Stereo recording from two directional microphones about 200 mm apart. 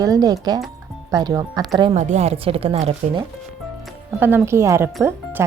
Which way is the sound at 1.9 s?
35° right (ahead or behind).